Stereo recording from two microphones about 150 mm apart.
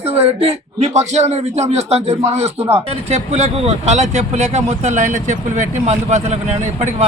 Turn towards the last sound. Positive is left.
turn(degrees=-45)  # may be behind; listen again after turning